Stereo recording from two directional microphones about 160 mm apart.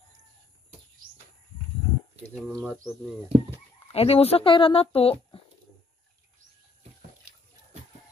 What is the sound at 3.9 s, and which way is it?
Speech, 40° left (ahead or behind).